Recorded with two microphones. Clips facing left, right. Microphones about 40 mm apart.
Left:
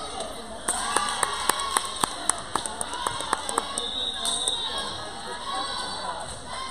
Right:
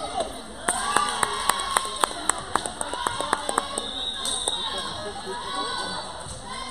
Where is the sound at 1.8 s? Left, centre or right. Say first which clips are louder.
Right 3 dB; right.